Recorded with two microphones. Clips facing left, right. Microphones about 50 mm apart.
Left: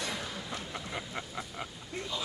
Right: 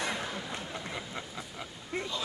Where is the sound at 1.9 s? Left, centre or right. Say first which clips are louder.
Right 4 dB; right.